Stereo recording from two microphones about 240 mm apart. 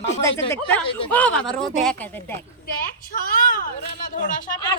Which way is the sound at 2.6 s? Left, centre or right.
Left.